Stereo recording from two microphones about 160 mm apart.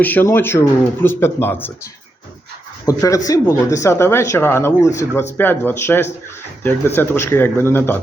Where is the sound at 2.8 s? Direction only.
20° left (ahead or behind).